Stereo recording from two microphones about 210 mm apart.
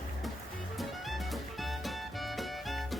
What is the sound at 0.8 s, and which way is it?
Music, centre (ahead or behind).